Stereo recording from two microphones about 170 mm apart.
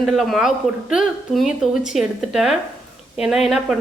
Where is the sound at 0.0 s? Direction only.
Centre (ahead or behind).